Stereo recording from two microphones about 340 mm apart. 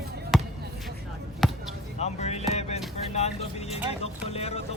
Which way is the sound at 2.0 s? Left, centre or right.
Centre.